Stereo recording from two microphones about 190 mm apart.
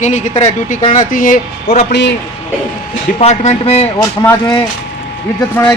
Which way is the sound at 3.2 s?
35° left (ahead or behind).